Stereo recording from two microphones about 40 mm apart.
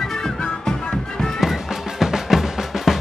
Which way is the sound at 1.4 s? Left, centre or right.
Centre.